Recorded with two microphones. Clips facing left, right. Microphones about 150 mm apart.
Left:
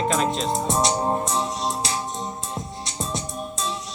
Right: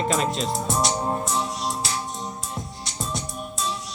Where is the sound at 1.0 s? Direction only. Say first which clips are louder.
Left 2 dB; 30° left (ahead or behind).